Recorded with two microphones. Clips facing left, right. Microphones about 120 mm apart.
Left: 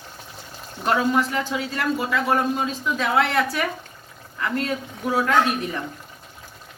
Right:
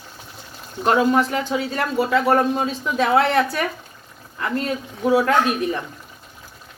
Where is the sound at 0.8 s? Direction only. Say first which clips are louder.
Right 4 dB; 30° right (ahead or behind).